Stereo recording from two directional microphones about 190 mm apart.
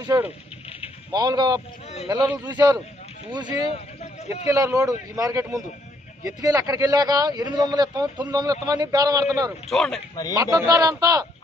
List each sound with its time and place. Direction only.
0.0 s speech: 10° right (ahead or behind)
3.6 s a sound: 30° left (ahead or behind)
4.5 s speech: 15° right (ahead or behind)
9.7 s speech: centre (ahead or behind)
10.3 s speech: 15° right (ahead or behind)